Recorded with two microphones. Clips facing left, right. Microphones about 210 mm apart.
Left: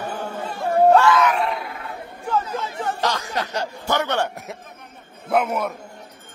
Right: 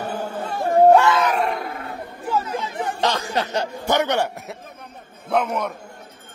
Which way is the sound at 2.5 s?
15° right (ahead or behind).